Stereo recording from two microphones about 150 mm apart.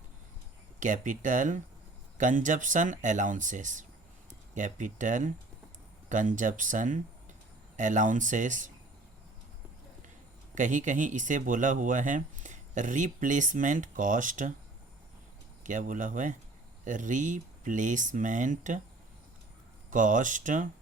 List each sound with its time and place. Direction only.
0.8 s speech: 60° right (ahead or behind)
10.5 s speech: 60° right (ahead or behind)
15.6 s speech: 60° right (ahead or behind)
19.9 s speech: 60° right (ahead or behind)